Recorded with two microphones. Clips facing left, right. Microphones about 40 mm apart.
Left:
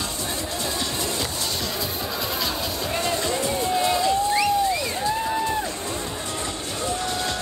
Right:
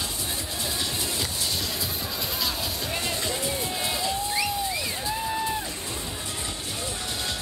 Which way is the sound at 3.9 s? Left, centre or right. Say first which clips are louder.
Left 7 dB; centre.